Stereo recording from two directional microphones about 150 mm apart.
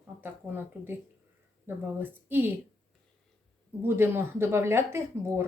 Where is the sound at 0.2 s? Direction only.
15° right (ahead or behind).